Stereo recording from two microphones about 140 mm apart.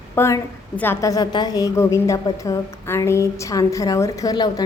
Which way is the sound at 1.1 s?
30° left (ahead or behind).